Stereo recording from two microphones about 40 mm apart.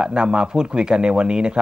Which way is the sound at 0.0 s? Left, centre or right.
Right.